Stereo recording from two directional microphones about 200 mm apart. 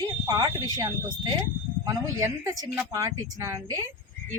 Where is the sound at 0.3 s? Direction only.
20° right (ahead or behind).